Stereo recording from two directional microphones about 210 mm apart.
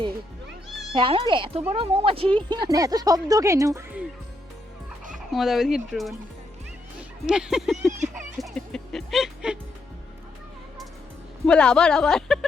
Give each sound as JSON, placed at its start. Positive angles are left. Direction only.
{"t": 0.9, "sound": "speech", "side_deg": -25}
{"t": 5.3, "sound": "speech", "side_deg": 0}
{"t": 7.3, "sound": "speech", "side_deg": -5}
{"t": 8.4, "sound": "music", "side_deg": 0}
{"t": 11.4, "sound": "speech", "side_deg": 5}